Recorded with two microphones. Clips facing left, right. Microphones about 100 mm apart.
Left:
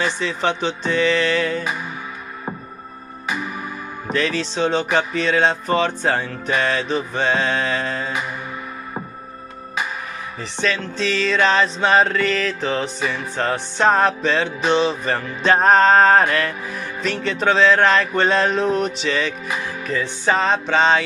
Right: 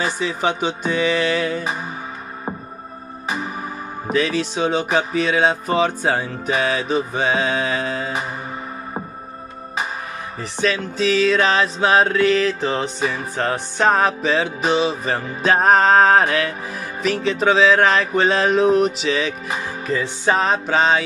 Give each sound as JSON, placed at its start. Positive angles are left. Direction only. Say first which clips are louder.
{"t": 0.0, "sound": "music", "louder": "even", "side_deg": -10}
{"t": 3.3, "sound": "music", "louder": "even", "side_deg": -35}
{"t": 4.1, "sound": "music", "louder": "right 2 dB", "side_deg": -10}
{"t": 10.6, "sound": "music", "louder": "right 2 dB", "side_deg": -5}